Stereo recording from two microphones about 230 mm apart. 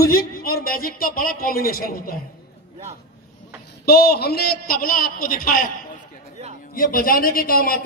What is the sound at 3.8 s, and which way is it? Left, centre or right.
A man's voice, left.